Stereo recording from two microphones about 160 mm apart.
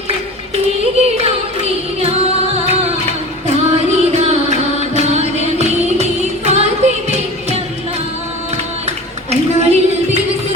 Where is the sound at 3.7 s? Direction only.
40° right (ahead or behind).